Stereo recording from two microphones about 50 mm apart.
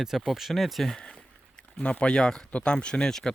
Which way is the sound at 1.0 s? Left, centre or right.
Centre.